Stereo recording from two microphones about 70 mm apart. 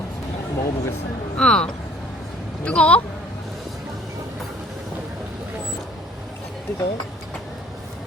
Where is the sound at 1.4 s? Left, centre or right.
Centre.